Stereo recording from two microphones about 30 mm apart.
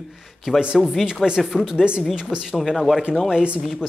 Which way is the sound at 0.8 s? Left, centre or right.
Centre.